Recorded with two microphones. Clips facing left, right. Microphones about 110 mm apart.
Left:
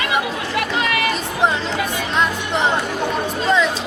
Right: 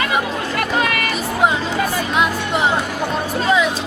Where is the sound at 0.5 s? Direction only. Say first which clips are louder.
Right 2 dB; 45° right (ahead or behind).